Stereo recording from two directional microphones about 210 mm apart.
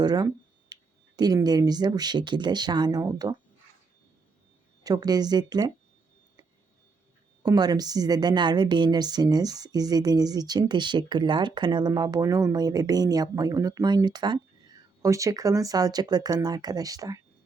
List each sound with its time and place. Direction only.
0.0 s a woman's voice: 20° right (ahead or behind)
4.8 s a woman's voice: 20° right (ahead or behind)
7.4 s a woman's voice: 20° right (ahead or behind)